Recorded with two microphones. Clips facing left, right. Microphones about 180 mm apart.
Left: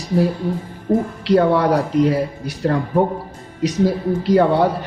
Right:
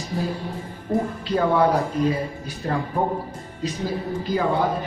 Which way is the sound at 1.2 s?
75° left (ahead or behind).